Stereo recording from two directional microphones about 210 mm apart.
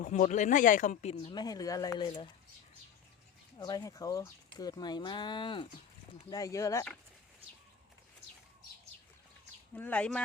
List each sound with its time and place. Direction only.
0.0 s speech: 35° left (ahead or behind); by 2.3 s 20° left (ahead or behind)
3.6 s speech: 20° left (ahead or behind)
9.7 s speech: 5° left (ahead or behind)